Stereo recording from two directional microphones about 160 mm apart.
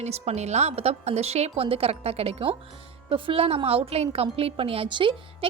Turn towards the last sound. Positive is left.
turn(degrees=-30)  # may be behind; listen again after turning